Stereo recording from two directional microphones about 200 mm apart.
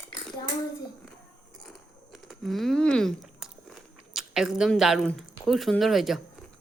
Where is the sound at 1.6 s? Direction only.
Centre (ahead or behind).